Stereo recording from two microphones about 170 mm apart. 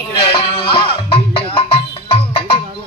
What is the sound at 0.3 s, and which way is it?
Music, 30° left (ahead or behind).